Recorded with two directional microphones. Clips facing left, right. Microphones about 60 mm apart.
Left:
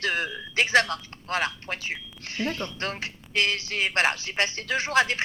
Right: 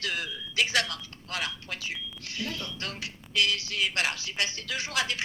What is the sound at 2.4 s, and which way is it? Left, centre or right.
Speech, left.